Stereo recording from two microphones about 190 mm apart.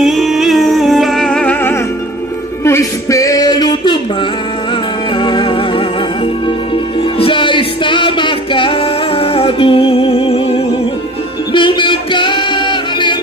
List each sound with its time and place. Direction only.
0.0 s music: centre (ahead or behind); by 4.0 s 25° left (ahead or behind)
5.1 s music: 25° left (ahead or behind)